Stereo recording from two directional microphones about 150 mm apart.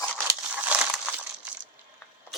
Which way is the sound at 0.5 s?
10° right (ahead or behind).